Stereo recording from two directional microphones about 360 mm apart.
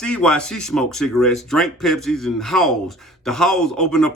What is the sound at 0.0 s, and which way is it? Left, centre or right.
Speech, centre.